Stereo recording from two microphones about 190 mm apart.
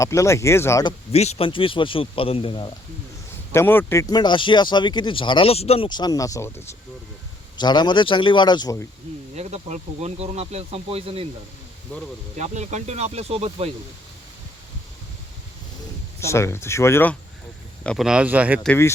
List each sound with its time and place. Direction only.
0.0 s speech: 15° left (ahead or behind)
1.1 s speech: 35° left (ahead or behind)
3.5 s speech: 10° left (ahead or behind)
9.3 s speech: 35° right (ahead or behind)
12.4 s speech: 35° right (ahead or behind)
16.2 s speech: 15° left (ahead or behind)
17.8 s speech: centre (ahead or behind)
18.7 s speech: 15° left (ahead or behind)